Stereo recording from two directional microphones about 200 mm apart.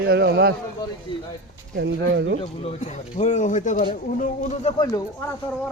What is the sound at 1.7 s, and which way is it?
Speech, 60° right (ahead or behind).